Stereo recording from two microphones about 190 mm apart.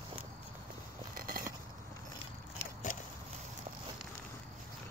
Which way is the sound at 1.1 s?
50° right (ahead or behind).